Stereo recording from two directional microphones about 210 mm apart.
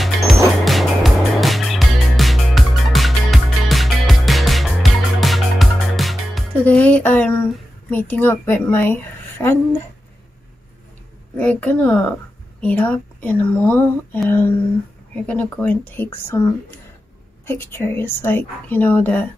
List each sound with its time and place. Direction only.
0.7 s music: centre (ahead or behind)
7.9 s a woman's voice: 10° left (ahead or behind)
11.3 s a woman's voice: 5° left (ahead or behind)
17.5 s a woman's voice: 10° left (ahead or behind)